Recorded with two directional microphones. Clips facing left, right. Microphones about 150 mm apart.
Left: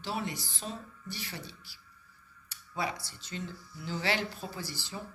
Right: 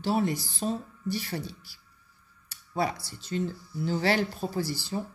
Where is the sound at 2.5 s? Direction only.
40° right (ahead or behind).